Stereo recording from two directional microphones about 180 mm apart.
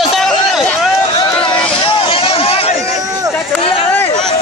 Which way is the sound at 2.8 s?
20° right (ahead or behind).